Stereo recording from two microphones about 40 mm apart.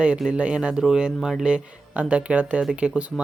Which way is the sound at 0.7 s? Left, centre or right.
Centre.